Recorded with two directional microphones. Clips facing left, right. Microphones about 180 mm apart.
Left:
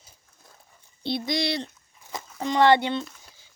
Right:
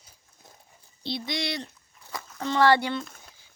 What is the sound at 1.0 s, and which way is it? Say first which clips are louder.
Speech: left 4 dB; 55° left (ahead or behind).